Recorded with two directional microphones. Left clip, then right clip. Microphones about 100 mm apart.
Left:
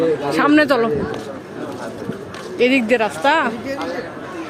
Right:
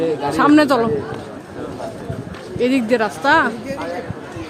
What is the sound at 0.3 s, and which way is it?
Speech, 15° right (ahead or behind).